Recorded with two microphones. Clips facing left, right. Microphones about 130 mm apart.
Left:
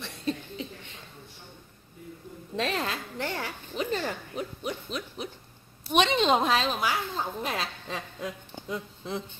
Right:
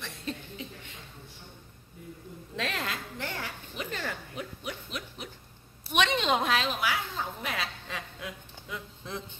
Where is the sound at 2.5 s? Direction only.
35° left (ahead or behind).